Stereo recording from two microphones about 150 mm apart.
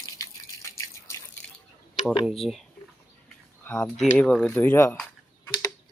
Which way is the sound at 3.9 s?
5° left (ahead or behind).